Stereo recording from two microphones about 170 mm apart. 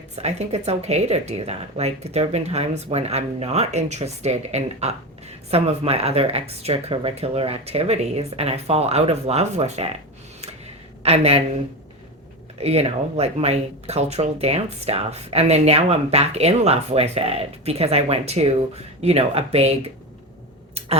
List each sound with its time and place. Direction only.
0.2 s speech: 40° right (ahead or behind)
11.0 s speech: 35° right (ahead or behind)
12.5 s speech: 35° right (ahead or behind)